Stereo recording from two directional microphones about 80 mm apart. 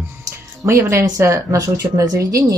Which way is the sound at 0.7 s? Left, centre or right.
Right.